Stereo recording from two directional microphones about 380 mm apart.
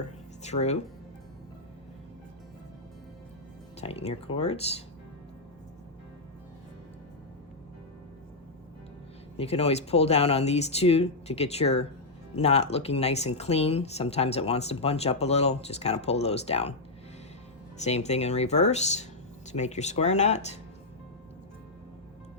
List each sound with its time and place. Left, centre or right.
0.4 s speech: centre
3.8 s speech: centre
9.4 s speech: centre
17.7 s speech: centre